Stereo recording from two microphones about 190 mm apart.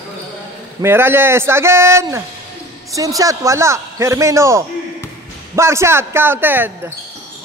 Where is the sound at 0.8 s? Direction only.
10° right (ahead or behind).